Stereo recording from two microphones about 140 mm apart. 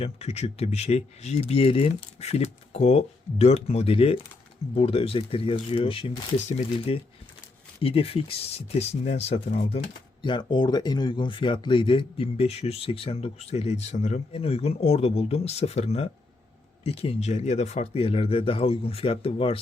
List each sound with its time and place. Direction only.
0.0 s speech: 50° left (ahead or behind)